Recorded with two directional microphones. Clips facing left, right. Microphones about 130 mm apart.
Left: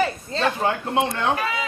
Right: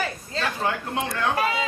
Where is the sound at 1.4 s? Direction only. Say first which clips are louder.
Right 2 dB; 30° right (ahead or behind).